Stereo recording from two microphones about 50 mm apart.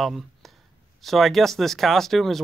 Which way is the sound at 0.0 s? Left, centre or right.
Centre.